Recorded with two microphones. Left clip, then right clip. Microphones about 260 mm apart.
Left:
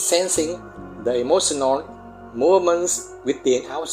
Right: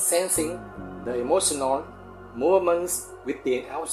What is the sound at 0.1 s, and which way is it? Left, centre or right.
Speech, left.